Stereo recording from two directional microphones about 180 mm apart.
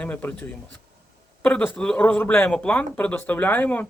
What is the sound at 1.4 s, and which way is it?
Speech, 10° left (ahead or behind).